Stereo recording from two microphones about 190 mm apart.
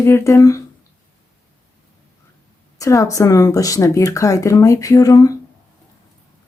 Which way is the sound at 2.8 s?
15° left (ahead or behind).